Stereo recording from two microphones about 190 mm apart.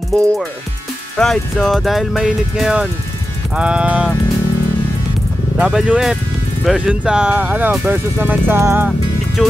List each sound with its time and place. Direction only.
0.1 s music: 15° right (ahead or behind)
1.1 s speech: centre (ahead or behind)
5.6 s speech: 5° right (ahead or behind)
9.4 s speech: centre (ahead or behind)